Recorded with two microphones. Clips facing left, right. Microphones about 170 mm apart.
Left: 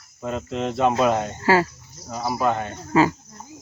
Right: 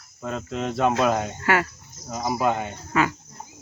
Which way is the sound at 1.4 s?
30° left (ahead or behind).